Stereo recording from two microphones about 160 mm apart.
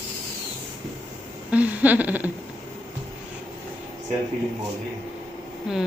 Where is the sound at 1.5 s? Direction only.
10° right (ahead or behind).